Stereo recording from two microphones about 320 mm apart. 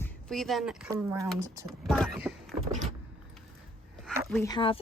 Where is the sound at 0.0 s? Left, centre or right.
Centre.